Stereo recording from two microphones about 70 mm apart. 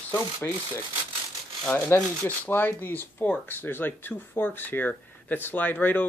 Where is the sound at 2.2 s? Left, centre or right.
Left.